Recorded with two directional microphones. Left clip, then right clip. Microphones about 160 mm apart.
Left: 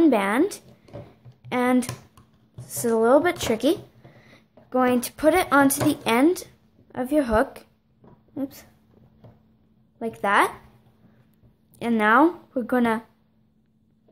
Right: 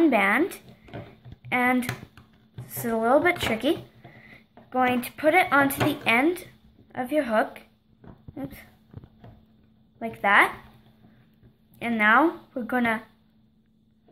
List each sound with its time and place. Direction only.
0.0 s a sound: 50° left (ahead or behind)
1.4 s a woman's voice: 45° left (ahead or behind)
9.9 s speech: 50° left (ahead or behind)
11.8 s speech: 55° left (ahead or behind)